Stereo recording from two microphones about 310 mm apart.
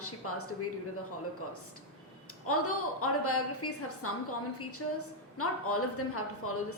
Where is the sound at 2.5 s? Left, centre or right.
Left.